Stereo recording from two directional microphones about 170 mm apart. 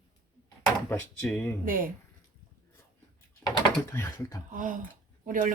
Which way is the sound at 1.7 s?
55° right (ahead or behind).